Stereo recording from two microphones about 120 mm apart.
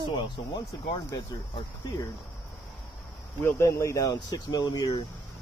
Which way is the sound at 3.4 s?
25° left (ahead or behind).